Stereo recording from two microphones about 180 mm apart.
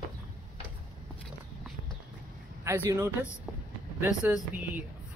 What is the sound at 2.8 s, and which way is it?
Speech, 15° right (ahead or behind).